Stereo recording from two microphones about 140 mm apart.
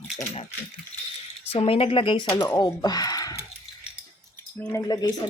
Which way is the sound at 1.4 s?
45° left (ahead or behind).